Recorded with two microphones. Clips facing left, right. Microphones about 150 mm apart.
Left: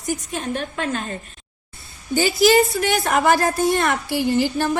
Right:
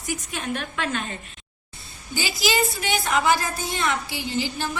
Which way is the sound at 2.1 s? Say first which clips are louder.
Left 9 dB; 50° left (ahead or behind).